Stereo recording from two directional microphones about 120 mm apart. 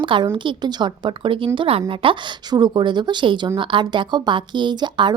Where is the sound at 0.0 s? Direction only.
40° right (ahead or behind).